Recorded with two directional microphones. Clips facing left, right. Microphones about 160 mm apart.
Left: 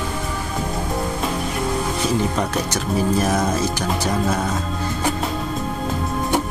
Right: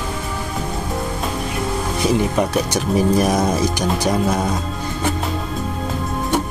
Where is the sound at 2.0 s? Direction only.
10° right (ahead or behind).